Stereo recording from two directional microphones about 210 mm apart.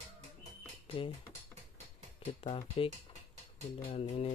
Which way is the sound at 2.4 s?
25° left (ahead or behind).